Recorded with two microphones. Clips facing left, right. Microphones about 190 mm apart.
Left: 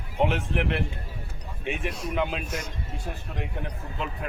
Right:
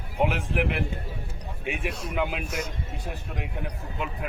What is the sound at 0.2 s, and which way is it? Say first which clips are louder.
Speech: even; 10° right (ahead or behind).